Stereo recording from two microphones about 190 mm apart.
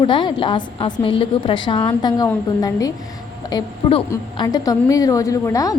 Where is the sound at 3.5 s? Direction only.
30° left (ahead or behind).